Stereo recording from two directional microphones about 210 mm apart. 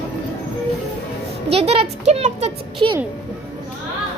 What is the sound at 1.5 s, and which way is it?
A woman's voice, 30° right (ahead or behind).